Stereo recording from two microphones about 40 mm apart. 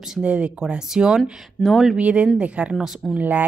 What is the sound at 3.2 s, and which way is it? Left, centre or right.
Speech, right.